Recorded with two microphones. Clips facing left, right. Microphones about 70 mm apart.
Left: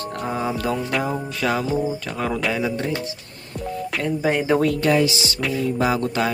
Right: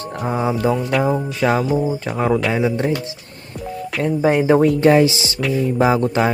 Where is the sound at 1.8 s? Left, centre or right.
Right.